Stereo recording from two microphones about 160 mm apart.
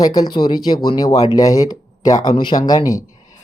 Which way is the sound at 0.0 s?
25° left (ahead or behind).